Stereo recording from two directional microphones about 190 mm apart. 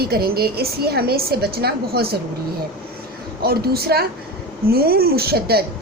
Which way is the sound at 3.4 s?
55° right (ahead or behind).